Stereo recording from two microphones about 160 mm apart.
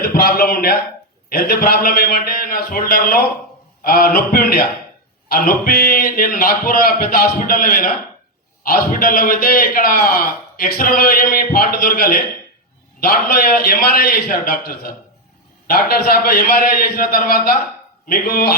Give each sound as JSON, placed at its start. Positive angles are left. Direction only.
{"t": 0.0, "sound": "a man's voice", "side_deg": 65}